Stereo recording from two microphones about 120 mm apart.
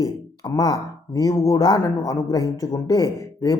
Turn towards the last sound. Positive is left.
turn(degrees=30)  # may be behind; listen again after turning